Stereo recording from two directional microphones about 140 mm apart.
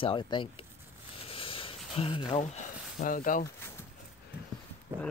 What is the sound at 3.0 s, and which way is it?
Speech, 70° left (ahead or behind).